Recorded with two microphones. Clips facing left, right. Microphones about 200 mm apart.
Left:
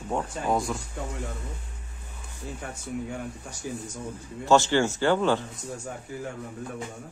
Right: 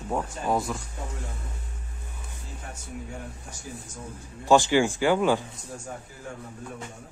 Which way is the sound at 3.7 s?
70° left (ahead or behind).